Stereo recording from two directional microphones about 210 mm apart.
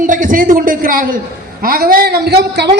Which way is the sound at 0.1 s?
40° right (ahead or behind).